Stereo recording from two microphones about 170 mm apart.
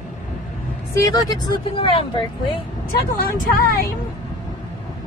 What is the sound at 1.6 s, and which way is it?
Speech, 35° left (ahead or behind).